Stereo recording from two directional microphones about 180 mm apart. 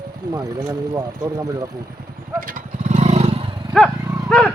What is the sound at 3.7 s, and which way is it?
Livestock, centre (ahead or behind).